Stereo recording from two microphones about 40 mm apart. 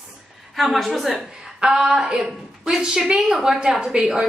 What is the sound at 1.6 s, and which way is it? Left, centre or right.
A woman's voice, centre.